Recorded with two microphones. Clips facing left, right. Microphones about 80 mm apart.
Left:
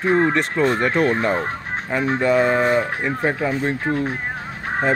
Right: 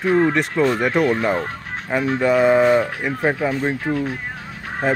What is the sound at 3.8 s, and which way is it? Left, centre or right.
Speech, left.